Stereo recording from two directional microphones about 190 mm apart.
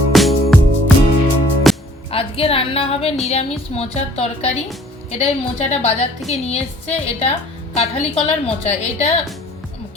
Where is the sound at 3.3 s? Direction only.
35° left (ahead or behind).